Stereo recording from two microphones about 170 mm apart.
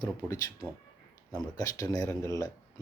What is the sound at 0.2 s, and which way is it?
Speech, 5° left (ahead or behind).